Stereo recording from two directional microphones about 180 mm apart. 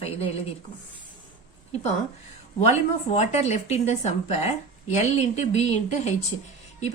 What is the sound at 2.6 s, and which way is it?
A woman's voice, 40° left (ahead or behind).